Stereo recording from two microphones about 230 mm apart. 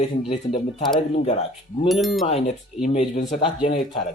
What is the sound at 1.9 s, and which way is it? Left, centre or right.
Speech, centre.